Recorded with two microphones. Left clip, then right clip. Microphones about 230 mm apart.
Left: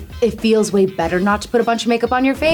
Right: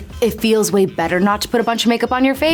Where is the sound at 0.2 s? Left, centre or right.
Right.